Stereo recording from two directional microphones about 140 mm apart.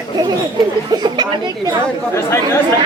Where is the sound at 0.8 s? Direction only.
30° right (ahead or behind).